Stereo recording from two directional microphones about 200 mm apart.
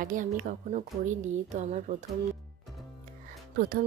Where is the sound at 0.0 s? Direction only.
40° right (ahead or behind).